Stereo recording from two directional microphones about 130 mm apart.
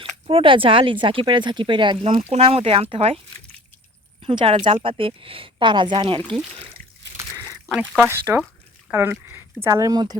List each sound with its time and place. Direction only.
0.0 s speech: 45° right (ahead or behind)
2.3 s speech: 50° right (ahead or behind)
4.2 s speech: 45° right (ahead or behind)
6.8 s a sound: 90° right
7.2 s a sound: 20° right (ahead or behind)
7.8 s speech: 15° right (ahead or behind); by 10.2 s 30° right (ahead or behind)